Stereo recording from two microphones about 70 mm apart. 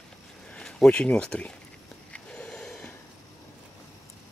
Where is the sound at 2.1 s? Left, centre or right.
Centre.